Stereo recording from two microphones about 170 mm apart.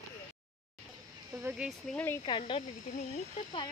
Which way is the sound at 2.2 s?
30° left (ahead or behind).